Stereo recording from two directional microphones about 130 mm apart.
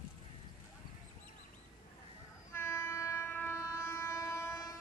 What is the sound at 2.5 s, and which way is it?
Train, 20° left (ahead or behind).